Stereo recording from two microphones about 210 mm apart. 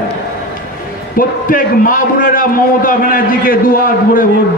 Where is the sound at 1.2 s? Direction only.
40° left (ahead or behind).